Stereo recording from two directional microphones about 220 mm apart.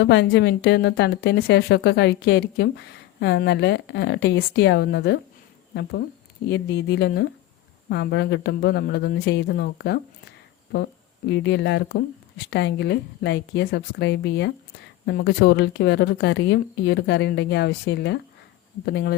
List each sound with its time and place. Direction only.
0.0 s a woman's voice: 50° left (ahead or behind)
6.5 s a woman's voice: 50° left (ahead or behind)
11.3 s a woman's voice: 55° left (ahead or behind)